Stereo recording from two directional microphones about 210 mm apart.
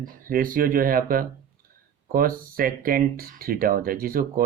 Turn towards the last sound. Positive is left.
turn(degrees=-45)  # may be behind; listen again after turning